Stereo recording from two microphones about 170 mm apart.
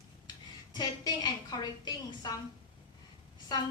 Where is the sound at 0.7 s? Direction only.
25° left (ahead or behind).